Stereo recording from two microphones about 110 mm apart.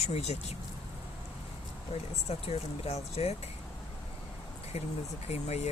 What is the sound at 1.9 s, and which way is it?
Speech, 65° left (ahead or behind).